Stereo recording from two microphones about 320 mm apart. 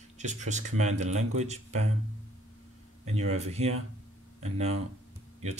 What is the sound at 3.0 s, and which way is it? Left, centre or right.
Speech, centre.